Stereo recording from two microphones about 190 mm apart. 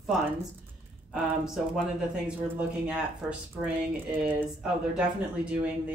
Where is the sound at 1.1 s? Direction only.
Centre (ahead or behind).